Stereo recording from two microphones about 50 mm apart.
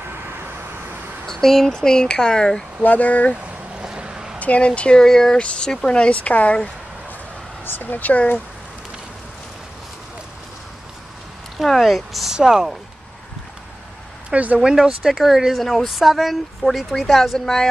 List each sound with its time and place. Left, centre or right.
1.2 s speech: centre
2.8 s speech: left
3.7 s vehicle: centre
4.4 s speech: left
7.6 s speech: left
11.6 s speech: centre
12.4 s speech: centre
14.3 s speech: right
14.6 s speech: centre